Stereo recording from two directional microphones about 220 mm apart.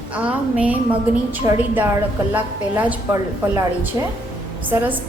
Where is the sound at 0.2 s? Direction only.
5° right (ahead or behind).